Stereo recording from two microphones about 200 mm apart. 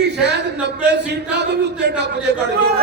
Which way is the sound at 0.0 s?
55° right (ahead or behind).